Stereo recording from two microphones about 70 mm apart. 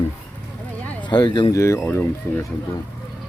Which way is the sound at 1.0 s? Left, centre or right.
Left.